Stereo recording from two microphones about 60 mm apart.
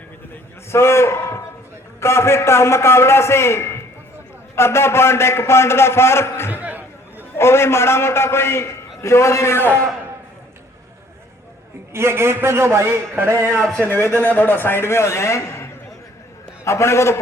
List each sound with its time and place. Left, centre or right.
0.7 s a man's voice: left
6.5 s chatter: right
7.3 s a man's voice: left
11.9 s a man's voice: right
14.2 s a man's voice: left